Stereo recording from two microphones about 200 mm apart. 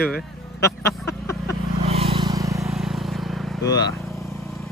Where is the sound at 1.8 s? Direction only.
30° right (ahead or behind).